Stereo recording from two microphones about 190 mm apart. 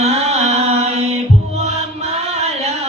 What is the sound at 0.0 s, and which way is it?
Mantra, 35° right (ahead or behind).